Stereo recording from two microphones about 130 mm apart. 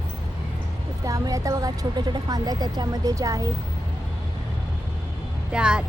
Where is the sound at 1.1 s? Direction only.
25° right (ahead or behind).